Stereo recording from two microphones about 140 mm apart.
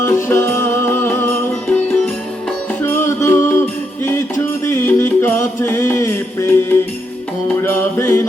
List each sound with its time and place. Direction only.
0.0 s music: 15° left (ahead or behind)